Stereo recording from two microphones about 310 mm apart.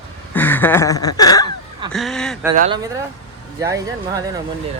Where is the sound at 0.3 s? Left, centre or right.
Centre.